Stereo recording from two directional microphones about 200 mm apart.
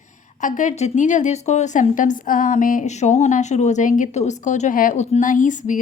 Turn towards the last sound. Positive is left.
turn(degrees=40)  # may be behind; listen again after turning